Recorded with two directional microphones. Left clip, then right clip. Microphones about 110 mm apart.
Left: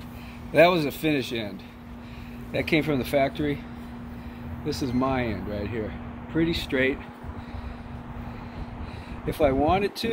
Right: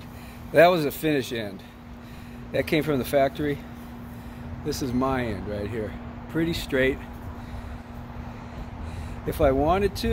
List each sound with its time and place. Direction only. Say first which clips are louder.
0.5 s speech: right 1 dB; 90° right
2.5 s speech: even; 55° right (ahead or behind)
4.6 s speech: even; 40° right (ahead or behind)
9.2 s speech: right 1 dB; 40° right (ahead or behind)